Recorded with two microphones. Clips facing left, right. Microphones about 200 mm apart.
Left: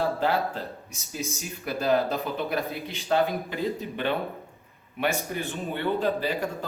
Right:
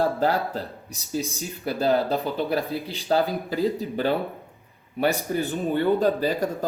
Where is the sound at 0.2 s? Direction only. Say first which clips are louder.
Right 2 dB; 40° right (ahead or behind).